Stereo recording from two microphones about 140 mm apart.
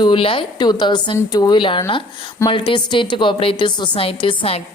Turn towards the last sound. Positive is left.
turn(degrees=40)  # may be behind; listen again after turning